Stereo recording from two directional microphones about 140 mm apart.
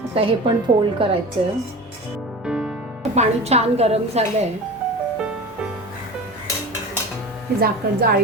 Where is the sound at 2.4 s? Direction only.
5° right (ahead or behind).